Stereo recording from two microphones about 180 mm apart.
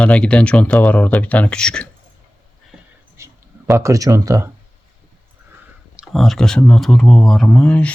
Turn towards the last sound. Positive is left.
turn(degrees=5)  # may be behind; listen again after turning